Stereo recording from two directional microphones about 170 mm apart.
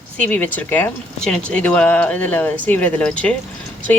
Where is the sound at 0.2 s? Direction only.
10° left (ahead or behind).